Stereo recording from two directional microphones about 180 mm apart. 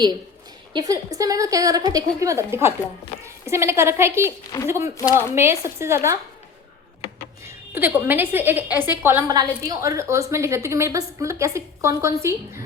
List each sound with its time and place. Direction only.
0.7 s a woman's voice: 20° right (ahead or behind)
7.4 s a woman's voice: 10° right (ahead or behind)